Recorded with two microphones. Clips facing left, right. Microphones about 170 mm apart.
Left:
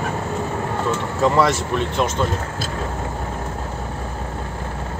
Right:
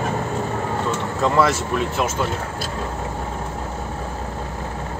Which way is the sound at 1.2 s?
Centre (ahead or behind).